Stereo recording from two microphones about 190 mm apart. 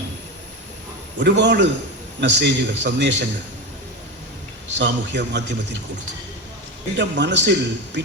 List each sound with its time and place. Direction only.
1.2 s a man's voice: 65° right (ahead or behind)
4.8 s a man's voice: 65° right (ahead or behind)
6.9 s a man's voice: 65° right (ahead or behind)